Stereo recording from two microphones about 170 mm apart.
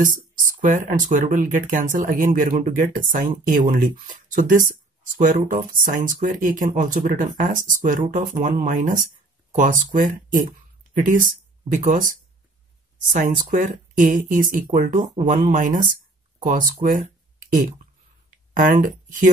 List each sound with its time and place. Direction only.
0.0 s speech: 50° right (ahead or behind)
18.5 s speech: 50° right (ahead or behind)